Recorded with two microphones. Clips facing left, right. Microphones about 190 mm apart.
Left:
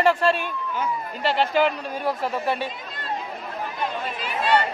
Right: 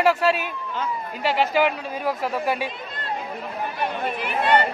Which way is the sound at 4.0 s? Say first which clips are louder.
Right 3 dB; 55° right (ahead or behind).